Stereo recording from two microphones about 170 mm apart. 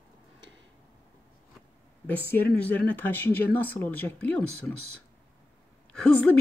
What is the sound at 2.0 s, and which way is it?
Speech, 10° left (ahead or behind).